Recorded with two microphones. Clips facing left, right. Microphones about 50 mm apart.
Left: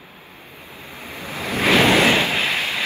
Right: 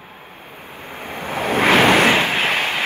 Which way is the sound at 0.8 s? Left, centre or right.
Right.